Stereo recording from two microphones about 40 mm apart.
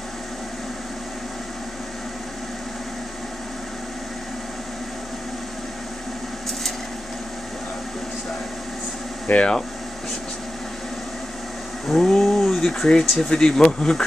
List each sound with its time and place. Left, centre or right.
9.3 s speech: left
11.9 s speech: centre
13.3 s speech: left